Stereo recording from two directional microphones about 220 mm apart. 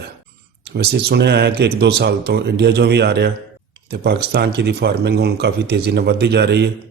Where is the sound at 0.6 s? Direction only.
50° right (ahead or behind).